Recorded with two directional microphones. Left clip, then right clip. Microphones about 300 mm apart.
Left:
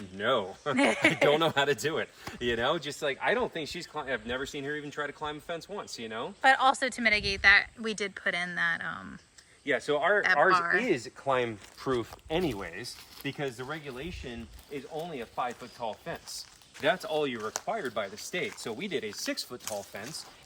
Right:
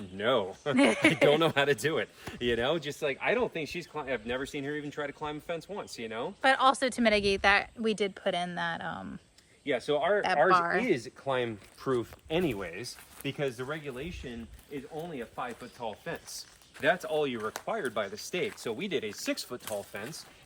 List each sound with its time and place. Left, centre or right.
0.2 s speech: centre
9.6 s speech: left
10.5 s speech: centre
10.8 s speech: left
12.3 s speech: centre
15.8 s speech: centre